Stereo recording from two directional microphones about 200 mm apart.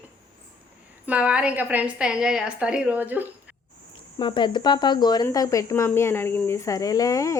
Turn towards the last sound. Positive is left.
turn(degrees=15)  # may be behind; listen again after turning